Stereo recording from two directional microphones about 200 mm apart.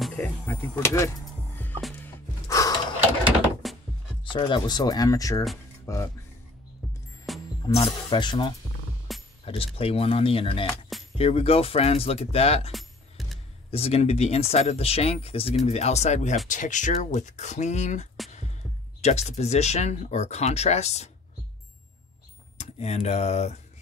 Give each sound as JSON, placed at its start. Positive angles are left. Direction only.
{"t": 0.0, "sound": "speech", "side_deg": 10}
{"t": 1.2, "sound": "music", "side_deg": 10}
{"t": 2.4, "sound": "a sound", "side_deg": 15}
{"t": 3.6, "sound": "music", "side_deg": 0}
{"t": 4.2, "sound": "speech", "side_deg": 25}
{"t": 7.3, "sound": "music", "side_deg": 0}
{"t": 7.8, "sound": "speech", "side_deg": 20}
{"t": 12.7, "sound": "music", "side_deg": 0}
{"t": 13.7, "sound": "speech", "side_deg": 30}
{"t": 22.6, "sound": "speech", "side_deg": 35}